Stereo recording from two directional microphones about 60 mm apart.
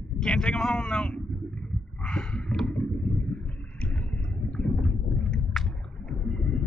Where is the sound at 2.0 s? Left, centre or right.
Centre.